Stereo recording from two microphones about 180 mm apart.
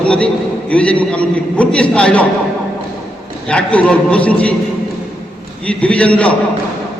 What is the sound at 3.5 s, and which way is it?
A man's voice, 5° left (ahead or behind).